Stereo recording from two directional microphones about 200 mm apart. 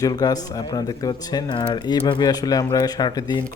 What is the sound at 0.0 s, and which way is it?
Speech, 20° left (ahead or behind).